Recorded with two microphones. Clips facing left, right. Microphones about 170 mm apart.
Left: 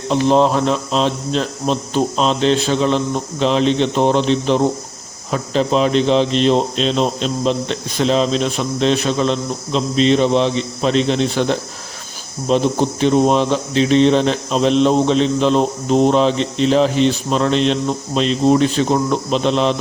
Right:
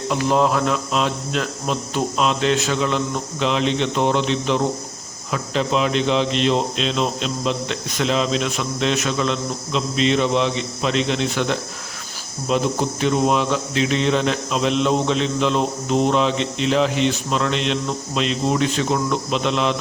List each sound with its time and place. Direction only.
0.1 s a man's voice: 25° left (ahead or behind)